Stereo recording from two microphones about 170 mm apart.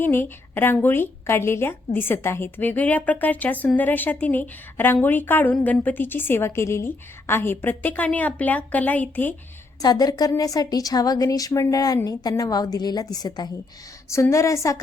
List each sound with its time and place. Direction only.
0.0 s a woman's voice: 10° left (ahead or behind)
9.8 s a woman's voice: 25° left (ahead or behind)